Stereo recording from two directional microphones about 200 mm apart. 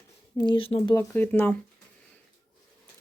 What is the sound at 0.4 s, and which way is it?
Speech, 25° left (ahead or behind).